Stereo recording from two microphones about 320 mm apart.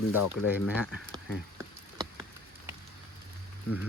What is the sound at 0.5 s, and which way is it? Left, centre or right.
Speech, centre.